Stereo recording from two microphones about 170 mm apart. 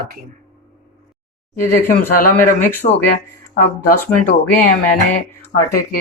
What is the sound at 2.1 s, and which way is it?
Speech, 55° left (ahead or behind).